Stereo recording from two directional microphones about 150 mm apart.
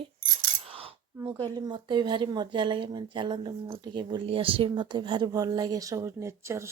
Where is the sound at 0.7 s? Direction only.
40° right (ahead or behind).